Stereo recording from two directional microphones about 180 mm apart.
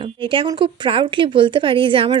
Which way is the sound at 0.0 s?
30° right (ahead or behind).